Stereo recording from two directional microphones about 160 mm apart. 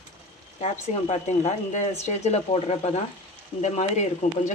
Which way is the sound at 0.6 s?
45° left (ahead or behind).